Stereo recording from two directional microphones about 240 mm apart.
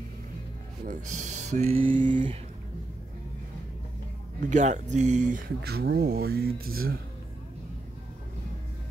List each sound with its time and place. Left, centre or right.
0.8 s speech: right
4.4 s speech: right